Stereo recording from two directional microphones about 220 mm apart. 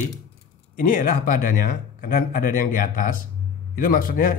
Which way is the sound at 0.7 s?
40° left (ahead or behind).